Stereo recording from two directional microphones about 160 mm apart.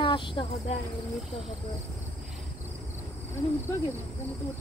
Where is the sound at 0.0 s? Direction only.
30° left (ahead or behind).